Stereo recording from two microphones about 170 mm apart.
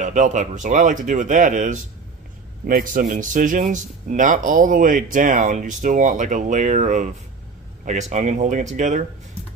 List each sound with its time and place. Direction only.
0.0 s a man's voice: 45° right (ahead or behind)